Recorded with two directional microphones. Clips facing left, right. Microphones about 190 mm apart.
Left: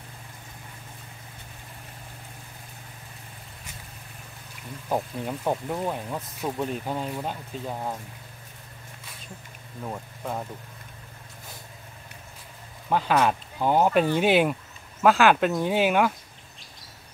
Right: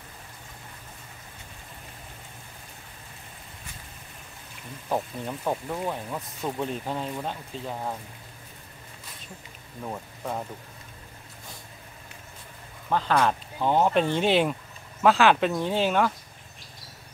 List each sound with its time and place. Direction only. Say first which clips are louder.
4.8 s speech: left 1 dB; 10° left (ahead or behind)
9.8 s speech: even; centre (ahead or behind)
12.9 s speech: left 1 dB; 10° left (ahead or behind)